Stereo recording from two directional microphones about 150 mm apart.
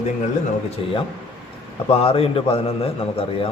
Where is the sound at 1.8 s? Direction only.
40° left (ahead or behind).